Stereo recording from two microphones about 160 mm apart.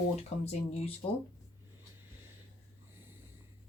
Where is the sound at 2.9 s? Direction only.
15° right (ahead or behind).